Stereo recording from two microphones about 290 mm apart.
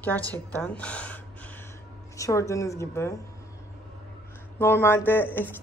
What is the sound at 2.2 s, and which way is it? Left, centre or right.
Speech, centre.